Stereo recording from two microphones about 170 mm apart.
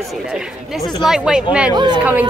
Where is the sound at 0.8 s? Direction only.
25° left (ahead or behind).